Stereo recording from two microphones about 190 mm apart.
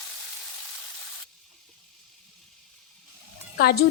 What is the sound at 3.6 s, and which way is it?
Speech, 55° left (ahead or behind).